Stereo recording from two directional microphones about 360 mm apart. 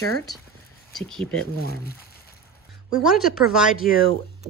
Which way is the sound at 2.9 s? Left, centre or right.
Centre.